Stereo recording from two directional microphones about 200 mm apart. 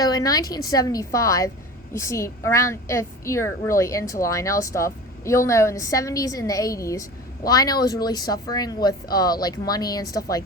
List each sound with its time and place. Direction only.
0.0 s a woman's voice: 20° left (ahead or behind)